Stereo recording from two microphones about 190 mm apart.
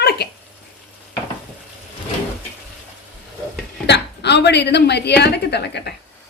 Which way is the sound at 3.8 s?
65° left (ahead or behind).